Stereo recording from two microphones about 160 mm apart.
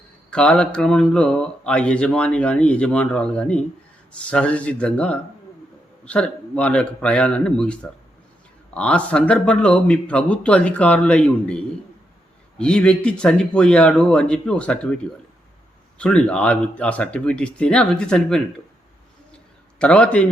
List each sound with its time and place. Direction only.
0.3 s speech: 5° left (ahead or behind)
16.0 s speech: 5° left (ahead or behind)
19.8 s speech: 5° left (ahead or behind)